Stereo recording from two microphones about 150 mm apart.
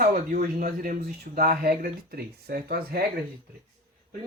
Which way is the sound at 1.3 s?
80° right.